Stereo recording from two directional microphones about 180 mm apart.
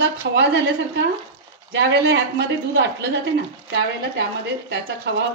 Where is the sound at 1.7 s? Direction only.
80° right.